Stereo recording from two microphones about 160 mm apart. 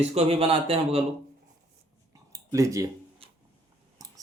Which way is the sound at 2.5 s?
20° right (ahead or behind).